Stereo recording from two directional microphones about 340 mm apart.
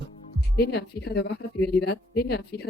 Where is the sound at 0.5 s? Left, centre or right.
Left.